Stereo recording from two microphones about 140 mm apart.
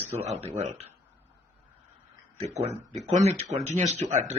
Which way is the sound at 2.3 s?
50° right (ahead or behind).